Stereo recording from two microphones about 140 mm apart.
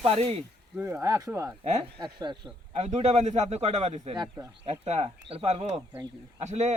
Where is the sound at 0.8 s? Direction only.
20° right (ahead or behind).